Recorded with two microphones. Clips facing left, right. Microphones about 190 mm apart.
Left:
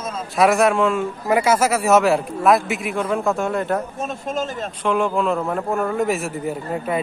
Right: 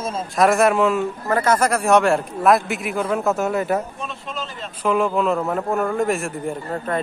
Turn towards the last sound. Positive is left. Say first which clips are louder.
# left 1 dB
turn(degrees=10)  # may be behind; listen again after turning